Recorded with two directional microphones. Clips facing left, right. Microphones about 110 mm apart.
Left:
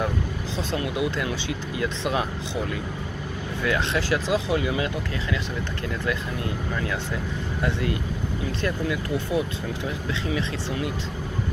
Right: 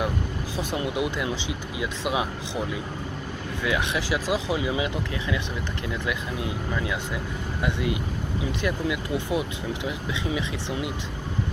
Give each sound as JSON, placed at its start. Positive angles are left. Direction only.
{"t": 0.6, "sound": "speech", "side_deg": -15}
{"t": 7.6, "sound": "speech", "side_deg": -15}